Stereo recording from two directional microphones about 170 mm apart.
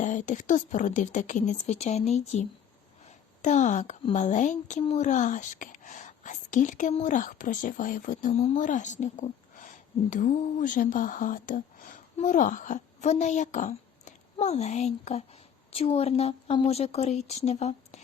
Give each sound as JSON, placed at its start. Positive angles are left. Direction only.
{"t": 0.0, "sound": "a woman's voice", "side_deg": 45}